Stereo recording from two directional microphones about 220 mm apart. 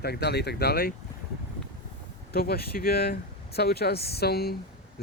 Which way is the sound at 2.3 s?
45° left (ahead or behind).